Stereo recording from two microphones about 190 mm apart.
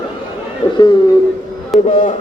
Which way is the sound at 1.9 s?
40° left (ahead or behind).